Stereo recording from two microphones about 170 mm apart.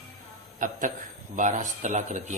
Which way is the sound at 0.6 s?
50° right (ahead or behind).